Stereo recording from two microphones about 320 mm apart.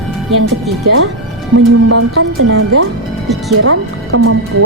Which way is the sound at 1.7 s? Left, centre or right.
Right.